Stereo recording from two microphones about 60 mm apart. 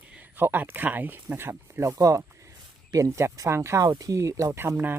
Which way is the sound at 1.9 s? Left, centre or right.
Right.